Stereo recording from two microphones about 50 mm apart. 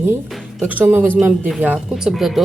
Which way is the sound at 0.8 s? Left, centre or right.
Right.